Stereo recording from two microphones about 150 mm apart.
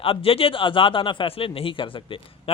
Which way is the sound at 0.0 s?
40° left (ahead or behind).